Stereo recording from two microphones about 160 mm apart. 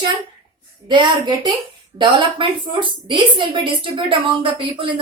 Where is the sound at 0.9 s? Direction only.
30° right (ahead or behind).